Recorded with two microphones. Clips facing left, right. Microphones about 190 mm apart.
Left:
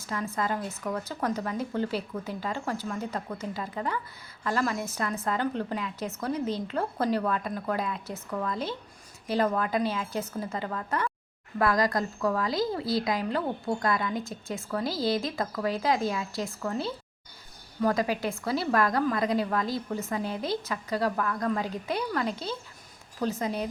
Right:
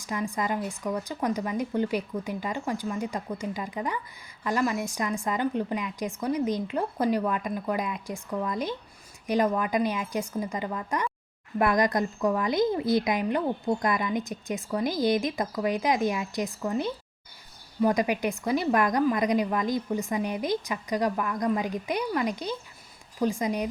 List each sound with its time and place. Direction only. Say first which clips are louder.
0.0 s speech: right 1 dB; 15° right (ahead or behind)